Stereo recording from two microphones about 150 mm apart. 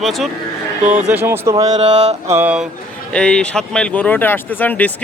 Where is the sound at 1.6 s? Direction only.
50° right (ahead or behind).